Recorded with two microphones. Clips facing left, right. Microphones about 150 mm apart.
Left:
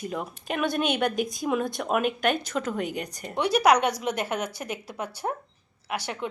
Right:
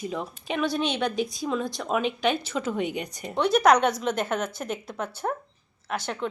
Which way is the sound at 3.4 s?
10° left (ahead or behind).